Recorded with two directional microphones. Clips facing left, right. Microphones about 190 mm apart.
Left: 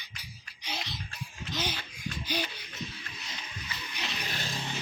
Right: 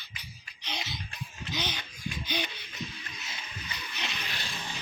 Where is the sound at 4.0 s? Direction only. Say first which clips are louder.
Even; 10° left (ahead or behind).